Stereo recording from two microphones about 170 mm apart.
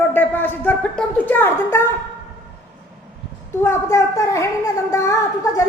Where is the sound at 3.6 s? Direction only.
15° left (ahead or behind).